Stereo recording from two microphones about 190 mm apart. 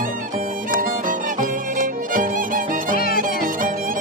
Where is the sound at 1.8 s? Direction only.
45° right (ahead or behind).